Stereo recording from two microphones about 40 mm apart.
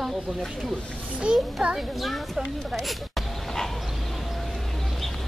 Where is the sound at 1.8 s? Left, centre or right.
Centre.